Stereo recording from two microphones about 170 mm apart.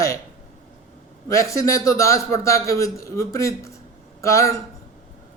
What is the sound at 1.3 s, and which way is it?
A man's voice, 20° left (ahead or behind).